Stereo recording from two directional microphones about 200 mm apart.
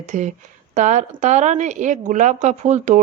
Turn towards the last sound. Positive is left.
turn(degrees=-35)  # may be behind; listen again after turning